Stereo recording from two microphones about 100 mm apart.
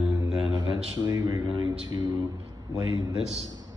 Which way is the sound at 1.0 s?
45° right (ahead or behind).